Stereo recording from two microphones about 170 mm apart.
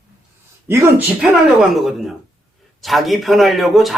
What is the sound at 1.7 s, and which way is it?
A man's voice, centre (ahead or behind).